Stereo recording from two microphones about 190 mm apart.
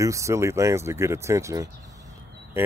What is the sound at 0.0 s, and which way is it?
Speech, 15° right (ahead or behind).